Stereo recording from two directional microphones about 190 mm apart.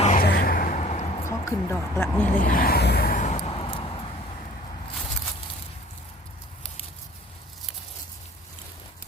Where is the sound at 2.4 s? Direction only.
45° left (ahead or behind); by 4.0 s 30° left (ahead or behind).